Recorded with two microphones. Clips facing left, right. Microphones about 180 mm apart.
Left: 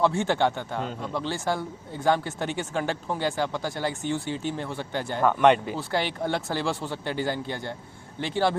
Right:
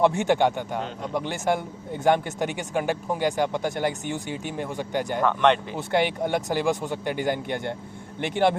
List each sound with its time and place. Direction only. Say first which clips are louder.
0.0 s speech: right 3 dB; 20° right (ahead or behind)
5.2 s speech: left 2 dB; 10° left (ahead or behind)
5.7 s speech: right 4 dB; 20° right (ahead or behind)